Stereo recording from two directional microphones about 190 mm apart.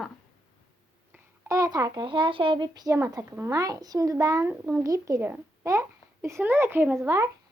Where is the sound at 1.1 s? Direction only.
15° right (ahead or behind).